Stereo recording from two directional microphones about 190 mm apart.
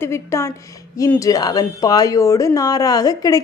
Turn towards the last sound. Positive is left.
turn(degrees=20)  # may be behind; listen again after turning